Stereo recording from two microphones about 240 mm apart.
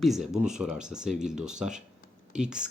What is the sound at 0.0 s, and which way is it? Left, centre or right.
Speech, centre.